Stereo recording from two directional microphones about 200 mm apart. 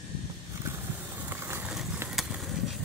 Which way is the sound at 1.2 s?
10° right (ahead or behind).